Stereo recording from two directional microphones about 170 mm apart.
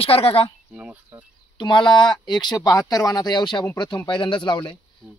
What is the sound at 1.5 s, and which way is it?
Speech, 30° left (ahead or behind).